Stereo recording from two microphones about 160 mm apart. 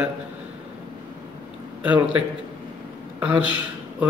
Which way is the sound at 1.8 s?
10° right (ahead or behind).